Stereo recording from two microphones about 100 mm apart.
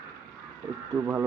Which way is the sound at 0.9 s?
30° right (ahead or behind).